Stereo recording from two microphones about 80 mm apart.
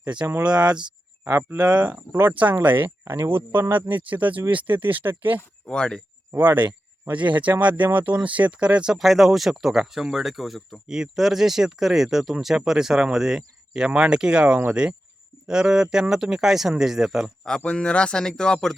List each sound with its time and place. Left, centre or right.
0.0 s speech: centre
1.2 s speech: right
1.5 s speech: centre
5.6 s speech: centre
6.3 s speech: right; by 17.3 s centre
17.7 s speech: centre